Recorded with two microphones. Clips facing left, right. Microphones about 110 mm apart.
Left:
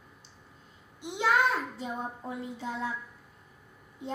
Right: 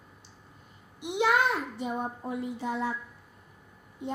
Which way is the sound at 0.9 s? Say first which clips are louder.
Right 7 dB; 70° right (ahead or behind).